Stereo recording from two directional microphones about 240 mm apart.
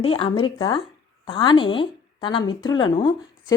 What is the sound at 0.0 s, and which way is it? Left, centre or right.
A woman's voice, left.